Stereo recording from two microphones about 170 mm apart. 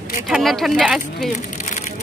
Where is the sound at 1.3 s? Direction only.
45° left (ahead or behind).